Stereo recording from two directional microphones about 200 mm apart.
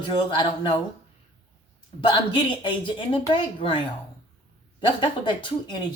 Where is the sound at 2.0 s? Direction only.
25° left (ahead or behind).